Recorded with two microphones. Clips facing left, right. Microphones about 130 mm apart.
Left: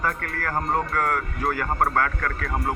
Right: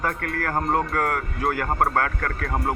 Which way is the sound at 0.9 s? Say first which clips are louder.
Even; 50° right (ahead or behind).